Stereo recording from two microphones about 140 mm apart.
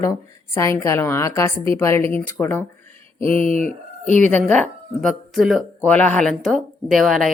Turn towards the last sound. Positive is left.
turn(degrees=0)  # may be behind; listen again after turning